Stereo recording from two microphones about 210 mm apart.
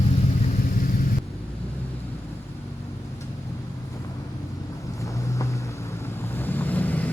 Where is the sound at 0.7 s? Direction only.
45° left (ahead or behind).